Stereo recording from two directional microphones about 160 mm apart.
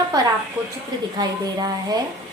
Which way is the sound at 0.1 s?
25° right (ahead or behind).